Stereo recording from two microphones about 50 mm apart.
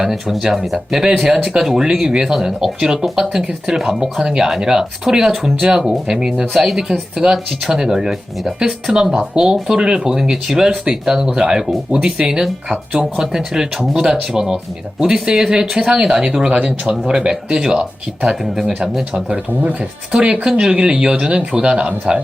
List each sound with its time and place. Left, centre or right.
0.0 s speech: centre
16.5 s speech: right
16.8 s speech: centre
19.1 s speech: right